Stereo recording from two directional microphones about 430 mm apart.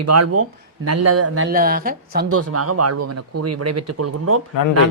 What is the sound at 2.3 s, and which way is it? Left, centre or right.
A woman's voice, right.